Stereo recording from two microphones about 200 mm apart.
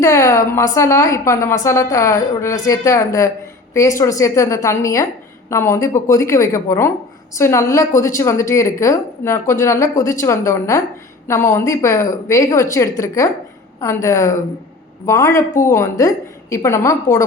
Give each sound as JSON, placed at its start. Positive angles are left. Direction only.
{"t": 0.0, "sound": "a woman's voice", "side_deg": 15}